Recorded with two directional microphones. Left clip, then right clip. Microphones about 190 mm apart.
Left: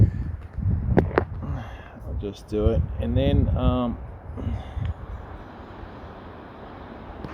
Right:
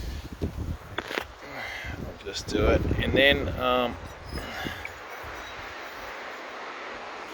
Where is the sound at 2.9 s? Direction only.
Centre (ahead or behind).